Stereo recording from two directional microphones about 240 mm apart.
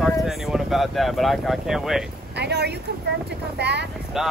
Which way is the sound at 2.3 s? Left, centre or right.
Right.